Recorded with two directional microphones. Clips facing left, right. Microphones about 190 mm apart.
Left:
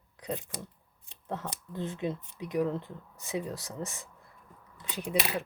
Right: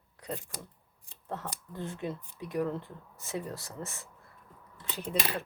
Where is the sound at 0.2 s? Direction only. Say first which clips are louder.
Left 3 dB; 20° left (ahead or behind).